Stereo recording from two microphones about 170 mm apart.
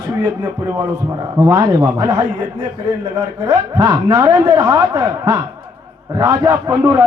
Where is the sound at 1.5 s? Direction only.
15° right (ahead or behind).